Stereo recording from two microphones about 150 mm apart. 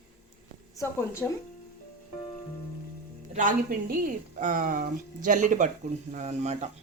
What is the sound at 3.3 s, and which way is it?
A woman's voice, 70° right (ahead or behind).